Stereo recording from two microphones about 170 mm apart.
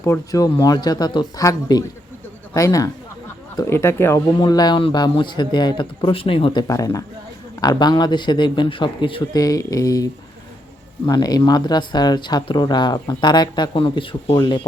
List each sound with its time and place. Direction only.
0.0 s speech: 20° left (ahead or behind)